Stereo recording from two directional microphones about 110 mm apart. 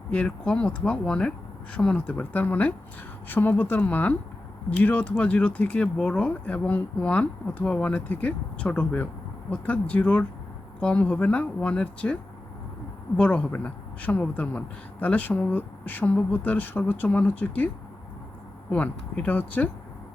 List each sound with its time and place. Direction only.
0.1 s a woman's voice: 10° left (ahead or behind)
13.1 s a woman's voice: 15° left (ahead or behind)
18.7 s a woman's voice: 10° left (ahead or behind)